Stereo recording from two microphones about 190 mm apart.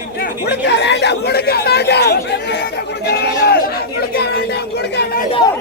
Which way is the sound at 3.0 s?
60° left (ahead or behind).